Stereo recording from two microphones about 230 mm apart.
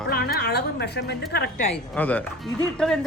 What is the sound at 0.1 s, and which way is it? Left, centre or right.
A woman's voice, left.